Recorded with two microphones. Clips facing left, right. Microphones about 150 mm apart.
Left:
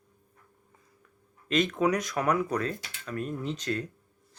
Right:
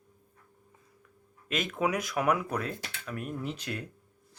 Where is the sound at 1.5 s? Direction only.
5° right (ahead or behind).